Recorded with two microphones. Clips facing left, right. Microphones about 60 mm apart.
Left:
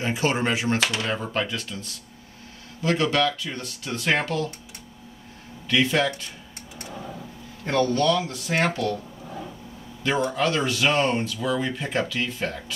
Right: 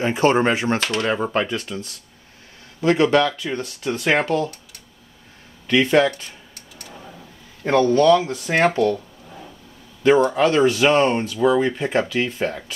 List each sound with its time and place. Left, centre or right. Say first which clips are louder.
0.0 s speech: right 7 dB; right
5.7 s speech: right 6 dB; right
7.9 s speech: right 7 dB; right
10.0 s speech: right 8 dB; right